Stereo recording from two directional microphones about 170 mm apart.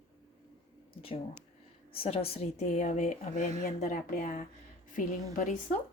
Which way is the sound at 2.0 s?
35° left (ahead or behind).